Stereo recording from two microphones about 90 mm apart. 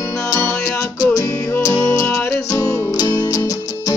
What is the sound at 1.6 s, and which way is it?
Music, 40° left (ahead or behind).